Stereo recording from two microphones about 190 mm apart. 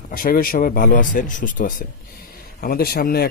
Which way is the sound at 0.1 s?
50° left (ahead or behind).